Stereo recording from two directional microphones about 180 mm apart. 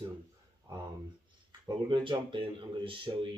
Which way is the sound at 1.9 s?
25° right (ahead or behind).